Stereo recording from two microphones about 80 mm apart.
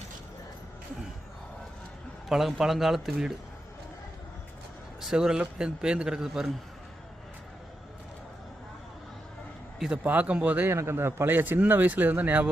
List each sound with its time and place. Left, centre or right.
2.3 s speech: centre
4.9 s speech: centre
9.9 s speech: centre
10.7 s speech: right